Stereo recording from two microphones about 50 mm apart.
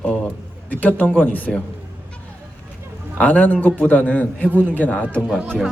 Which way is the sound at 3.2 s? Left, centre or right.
Left.